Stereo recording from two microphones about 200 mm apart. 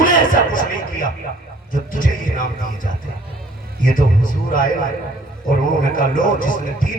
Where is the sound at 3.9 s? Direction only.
45° left (ahead or behind).